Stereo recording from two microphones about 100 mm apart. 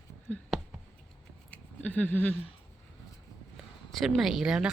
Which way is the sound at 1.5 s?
15° left (ahead or behind).